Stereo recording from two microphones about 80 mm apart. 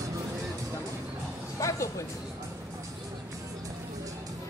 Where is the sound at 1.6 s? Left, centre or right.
Left.